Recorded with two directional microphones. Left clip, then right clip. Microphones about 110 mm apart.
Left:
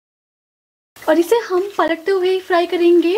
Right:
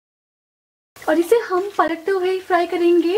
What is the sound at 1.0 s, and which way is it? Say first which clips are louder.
Speech: left 2 dB; 30° left (ahead or behind).